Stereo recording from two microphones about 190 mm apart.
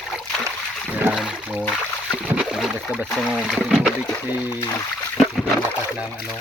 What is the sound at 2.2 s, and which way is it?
Rowboat, 5° right (ahead or behind).